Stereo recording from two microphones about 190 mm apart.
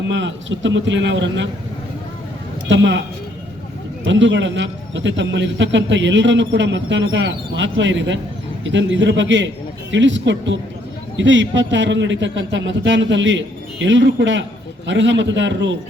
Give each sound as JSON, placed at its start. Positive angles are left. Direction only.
{"t": 0.1, "sound": "a man's voice", "side_deg": -75}
{"t": 2.6, "sound": "a man's voice", "side_deg": -70}
{"t": 4.0, "sound": "a man's voice", "side_deg": -75}